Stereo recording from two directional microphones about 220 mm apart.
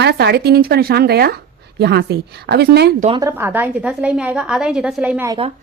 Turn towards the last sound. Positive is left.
turn(degrees=-10)  # may be behind; listen again after turning